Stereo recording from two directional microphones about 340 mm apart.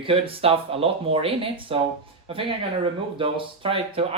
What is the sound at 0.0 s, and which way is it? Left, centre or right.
Speech, centre.